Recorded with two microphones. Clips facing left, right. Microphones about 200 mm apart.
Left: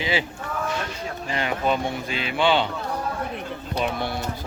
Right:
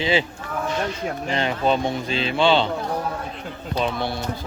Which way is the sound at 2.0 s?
15° left (ahead or behind).